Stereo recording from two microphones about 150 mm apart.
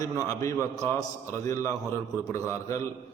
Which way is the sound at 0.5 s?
15° right (ahead or behind).